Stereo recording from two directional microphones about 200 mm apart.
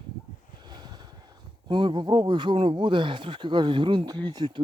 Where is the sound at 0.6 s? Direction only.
20° right (ahead or behind).